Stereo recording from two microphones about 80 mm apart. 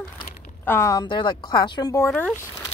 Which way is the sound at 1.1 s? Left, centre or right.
Left.